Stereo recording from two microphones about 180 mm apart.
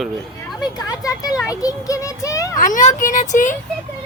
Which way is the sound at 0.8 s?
20° left (ahead or behind).